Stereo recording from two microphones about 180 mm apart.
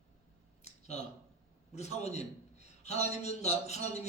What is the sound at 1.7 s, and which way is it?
A man's voice, 35° left (ahead or behind).